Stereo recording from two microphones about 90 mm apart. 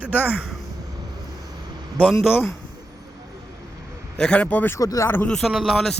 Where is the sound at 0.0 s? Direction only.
20° left (ahead or behind).